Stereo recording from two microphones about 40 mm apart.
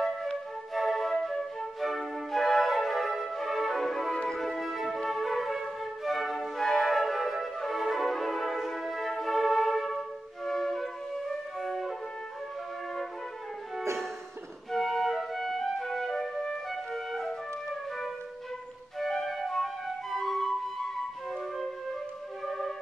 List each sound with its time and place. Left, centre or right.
0.7 s flute: centre
1.8 s music: centre
4.1 s music: centre
4.4 s music: centre
14.7 s music: centre
16.7 s flute: centre
19.6 s flute: centre